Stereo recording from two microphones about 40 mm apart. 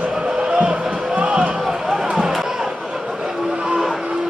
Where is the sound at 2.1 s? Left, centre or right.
Centre.